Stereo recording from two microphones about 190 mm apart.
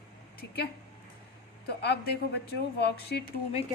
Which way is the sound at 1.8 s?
60° left (ahead or behind).